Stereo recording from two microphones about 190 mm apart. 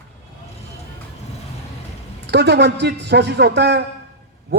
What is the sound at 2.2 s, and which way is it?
A man's voice, 60° right (ahead or behind).